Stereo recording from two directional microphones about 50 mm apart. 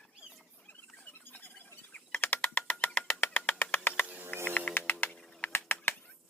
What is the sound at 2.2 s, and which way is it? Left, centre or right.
Bird, left.